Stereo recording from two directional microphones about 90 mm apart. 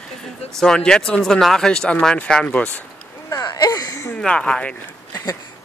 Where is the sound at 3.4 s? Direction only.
45° left (ahead or behind).